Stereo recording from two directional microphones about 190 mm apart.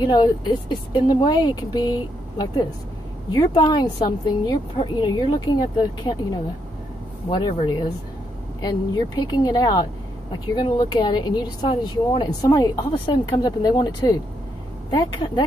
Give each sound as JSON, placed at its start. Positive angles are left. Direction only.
{"t": 0.0, "sound": "speech", "side_deg": 20}